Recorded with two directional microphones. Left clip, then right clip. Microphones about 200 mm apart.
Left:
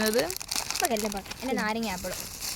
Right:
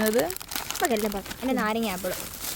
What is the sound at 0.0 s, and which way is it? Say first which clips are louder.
Crumpling: right 2 dB; 10° right (ahead or behind).